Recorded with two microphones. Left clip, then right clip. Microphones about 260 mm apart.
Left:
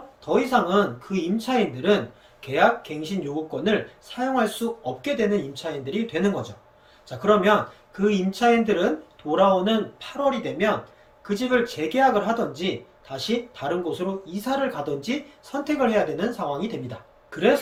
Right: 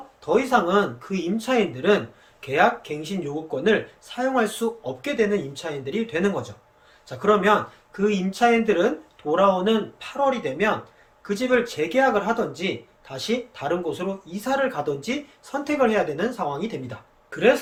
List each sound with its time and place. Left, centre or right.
0.3 s speech: centre